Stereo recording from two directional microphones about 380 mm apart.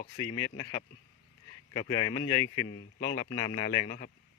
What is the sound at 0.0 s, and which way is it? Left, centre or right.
Speech, centre.